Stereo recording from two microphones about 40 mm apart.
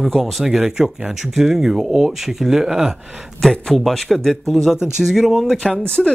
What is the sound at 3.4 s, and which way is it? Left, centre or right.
Speech, centre.